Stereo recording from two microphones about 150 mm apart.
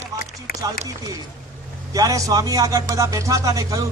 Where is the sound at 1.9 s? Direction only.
20° right (ahead or behind).